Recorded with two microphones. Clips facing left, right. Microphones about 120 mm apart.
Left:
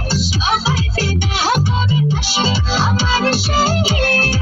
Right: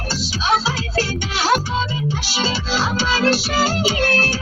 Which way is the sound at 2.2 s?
20° left (ahead or behind).